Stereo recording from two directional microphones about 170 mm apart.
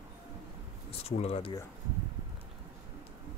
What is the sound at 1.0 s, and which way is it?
Speech, 40° left (ahead or behind).